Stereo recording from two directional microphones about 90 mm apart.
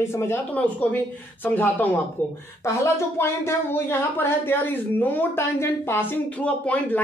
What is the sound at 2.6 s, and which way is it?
Speech, 30° left (ahead or behind).